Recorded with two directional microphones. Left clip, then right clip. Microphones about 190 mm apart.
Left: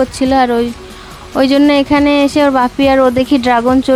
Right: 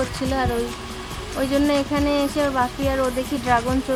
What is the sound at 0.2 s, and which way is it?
Speech, 40° left (ahead or behind).